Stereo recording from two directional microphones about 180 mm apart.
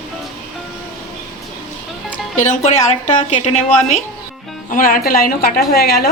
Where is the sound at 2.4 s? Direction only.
45° left (ahead or behind); by 6.1 s 60° left (ahead or behind).